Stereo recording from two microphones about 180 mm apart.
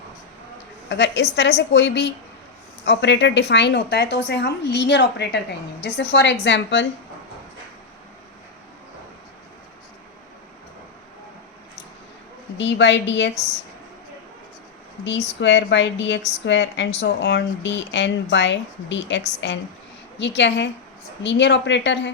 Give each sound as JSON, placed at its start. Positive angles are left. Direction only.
{"t": 0.9, "sound": "a woman's voice", "side_deg": 75}
{"t": 12.5, "sound": "a woman's voice", "side_deg": 85}
{"t": 15.0, "sound": "a woman's voice", "side_deg": 85}